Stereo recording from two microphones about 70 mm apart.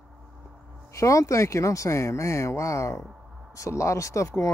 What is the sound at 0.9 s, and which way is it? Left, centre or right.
Speech, left.